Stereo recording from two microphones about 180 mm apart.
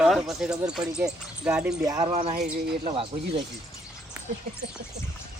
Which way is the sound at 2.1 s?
35° right (ahead or behind).